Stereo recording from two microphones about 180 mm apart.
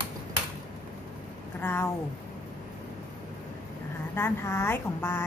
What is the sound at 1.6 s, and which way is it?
Speech, 15° left (ahead or behind).